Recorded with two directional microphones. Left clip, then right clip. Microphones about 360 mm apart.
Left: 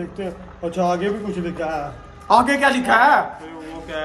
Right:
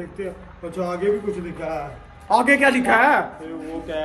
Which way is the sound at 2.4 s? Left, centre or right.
Left.